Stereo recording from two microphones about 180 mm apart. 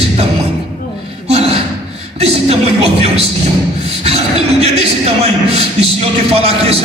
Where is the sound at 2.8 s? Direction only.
35° right (ahead or behind).